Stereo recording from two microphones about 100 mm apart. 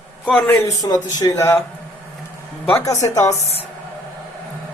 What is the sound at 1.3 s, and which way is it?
Speech, 30° left (ahead or behind).